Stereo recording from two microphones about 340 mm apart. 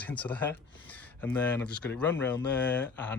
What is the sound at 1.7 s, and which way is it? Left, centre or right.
Speech, left.